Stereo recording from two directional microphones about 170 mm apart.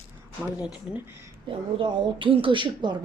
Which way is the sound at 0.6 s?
10° right (ahead or behind).